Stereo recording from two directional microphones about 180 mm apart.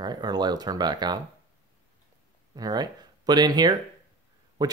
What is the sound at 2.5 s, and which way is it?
Speech, 20° right (ahead or behind).